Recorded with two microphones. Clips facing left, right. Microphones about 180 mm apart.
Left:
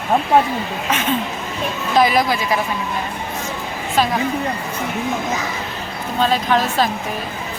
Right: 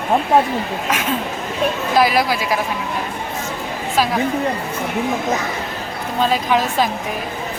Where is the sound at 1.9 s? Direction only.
5° right (ahead or behind).